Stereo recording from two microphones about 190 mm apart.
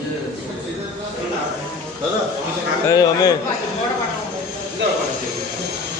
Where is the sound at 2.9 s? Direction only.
20° left (ahead or behind).